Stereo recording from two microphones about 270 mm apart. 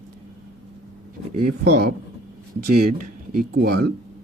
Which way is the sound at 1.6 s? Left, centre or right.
Right.